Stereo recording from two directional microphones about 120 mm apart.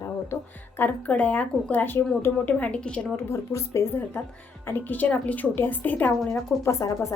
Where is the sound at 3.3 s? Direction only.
25° left (ahead or behind).